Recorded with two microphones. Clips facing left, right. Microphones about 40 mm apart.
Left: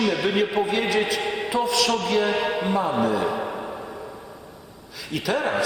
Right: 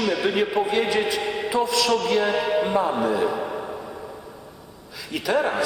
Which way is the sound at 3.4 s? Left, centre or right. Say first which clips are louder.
Right 1 dB; centre.